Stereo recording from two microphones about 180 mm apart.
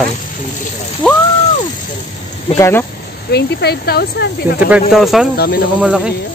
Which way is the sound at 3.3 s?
60° left (ahead or behind).